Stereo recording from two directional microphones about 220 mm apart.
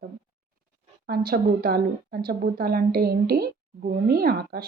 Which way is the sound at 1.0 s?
45° right (ahead or behind).